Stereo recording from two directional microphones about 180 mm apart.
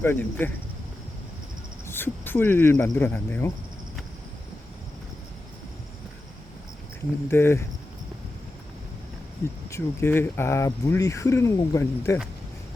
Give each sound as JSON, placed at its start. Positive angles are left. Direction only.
{"t": 0.0, "sound": "speech", "side_deg": 10}
{"t": 1.9, "sound": "speech", "side_deg": 10}
{"t": 7.3, "sound": "speech", "side_deg": 15}
{"t": 9.6, "sound": "speech", "side_deg": 15}